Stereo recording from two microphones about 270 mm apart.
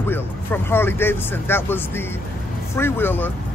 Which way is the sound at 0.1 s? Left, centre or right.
Centre.